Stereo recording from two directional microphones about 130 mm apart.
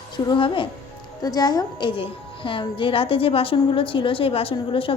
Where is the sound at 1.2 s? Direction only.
30° left (ahead or behind).